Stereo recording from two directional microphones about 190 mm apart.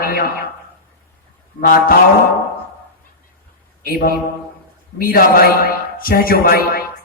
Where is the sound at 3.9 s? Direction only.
50° left (ahead or behind).